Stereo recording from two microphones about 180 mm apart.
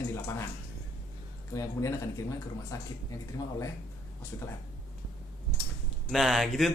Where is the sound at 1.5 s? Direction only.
15° left (ahead or behind).